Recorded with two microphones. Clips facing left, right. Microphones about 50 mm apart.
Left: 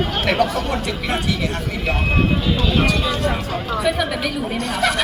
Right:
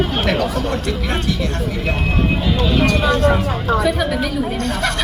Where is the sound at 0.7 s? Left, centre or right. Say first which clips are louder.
Right 1 dB; centre.